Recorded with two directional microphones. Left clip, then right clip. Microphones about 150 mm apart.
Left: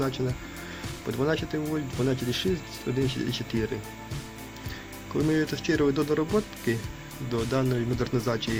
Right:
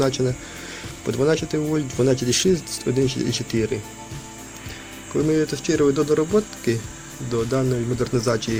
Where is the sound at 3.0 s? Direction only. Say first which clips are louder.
Right 6 dB; 10° right (ahead or behind).